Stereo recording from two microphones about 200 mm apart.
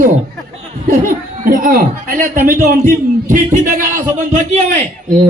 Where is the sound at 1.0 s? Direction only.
45° right (ahead or behind).